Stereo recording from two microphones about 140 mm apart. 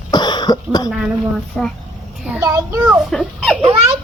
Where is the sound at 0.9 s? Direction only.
Centre (ahead or behind).